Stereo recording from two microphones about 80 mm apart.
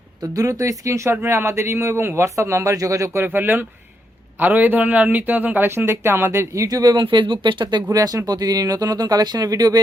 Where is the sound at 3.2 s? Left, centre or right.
Right.